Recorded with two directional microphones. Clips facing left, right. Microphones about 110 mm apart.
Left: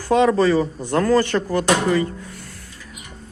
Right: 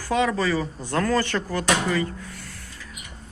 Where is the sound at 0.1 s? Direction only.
25° left (ahead or behind).